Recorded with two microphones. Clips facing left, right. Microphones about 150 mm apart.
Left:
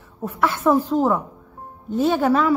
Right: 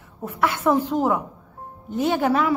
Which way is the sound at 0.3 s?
15° right (ahead or behind).